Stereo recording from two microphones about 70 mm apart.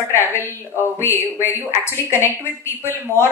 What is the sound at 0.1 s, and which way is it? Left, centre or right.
Speech, left.